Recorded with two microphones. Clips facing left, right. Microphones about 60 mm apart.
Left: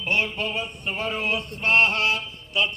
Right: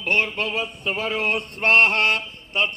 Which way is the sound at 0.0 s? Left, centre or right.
Right.